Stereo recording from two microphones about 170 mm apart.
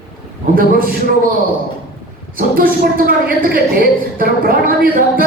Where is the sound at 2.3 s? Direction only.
60° right (ahead or behind).